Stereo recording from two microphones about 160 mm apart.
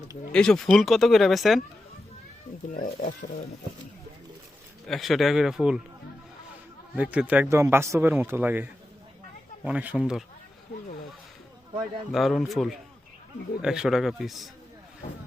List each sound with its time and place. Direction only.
0.3 s speech: 5° left (ahead or behind)
2.7 s speech: 60° left (ahead or behind)
4.9 s speech: centre (ahead or behind)
6.9 s speech: 10° right (ahead or behind)
12.1 s speech: centre (ahead or behind)